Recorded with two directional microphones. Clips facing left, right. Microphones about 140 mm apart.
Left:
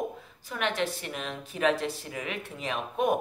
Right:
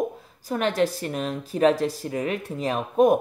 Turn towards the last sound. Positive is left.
turn(degrees=-40)  # may be behind; listen again after turning